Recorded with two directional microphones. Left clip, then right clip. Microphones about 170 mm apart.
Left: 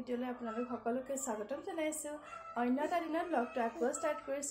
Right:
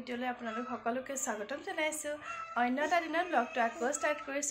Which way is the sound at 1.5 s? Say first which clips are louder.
Right 3 dB; centre (ahead or behind).